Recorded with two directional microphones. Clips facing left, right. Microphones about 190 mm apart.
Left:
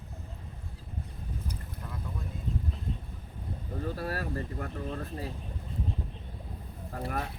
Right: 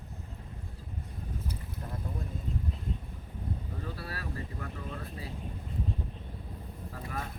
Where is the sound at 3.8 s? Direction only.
45° left (ahead or behind).